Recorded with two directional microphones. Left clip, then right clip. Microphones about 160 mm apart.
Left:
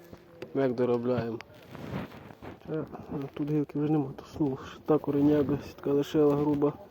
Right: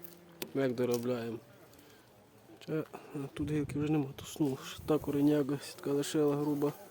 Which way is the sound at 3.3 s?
5° left (ahead or behind).